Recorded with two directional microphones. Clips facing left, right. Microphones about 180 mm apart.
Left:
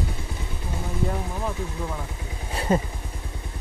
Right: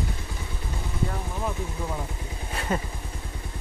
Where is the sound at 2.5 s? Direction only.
30° left (ahead or behind).